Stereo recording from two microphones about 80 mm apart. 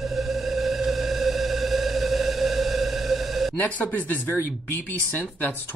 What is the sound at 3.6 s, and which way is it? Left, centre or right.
Speech, left.